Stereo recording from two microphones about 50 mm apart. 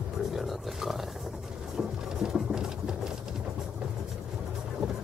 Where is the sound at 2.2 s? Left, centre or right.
Centre.